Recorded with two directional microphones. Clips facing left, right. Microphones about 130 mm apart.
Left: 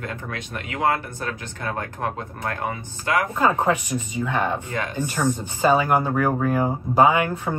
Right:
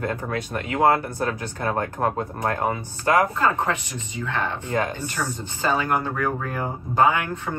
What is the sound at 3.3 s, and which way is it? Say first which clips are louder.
Speech: left 3 dB; 15° left (ahead or behind).